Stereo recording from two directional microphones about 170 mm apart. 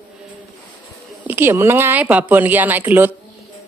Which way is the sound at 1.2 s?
10° right (ahead or behind).